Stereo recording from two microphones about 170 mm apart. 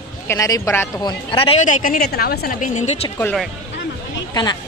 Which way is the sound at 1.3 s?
30° left (ahead or behind).